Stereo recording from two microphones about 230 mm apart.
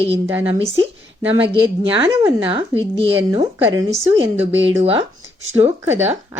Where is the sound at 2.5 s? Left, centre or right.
Right.